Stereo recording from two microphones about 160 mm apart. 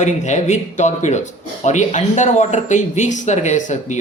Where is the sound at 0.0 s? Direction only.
45° left (ahead or behind).